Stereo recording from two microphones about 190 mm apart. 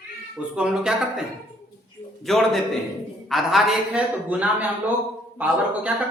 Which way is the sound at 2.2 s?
Centre (ahead or behind).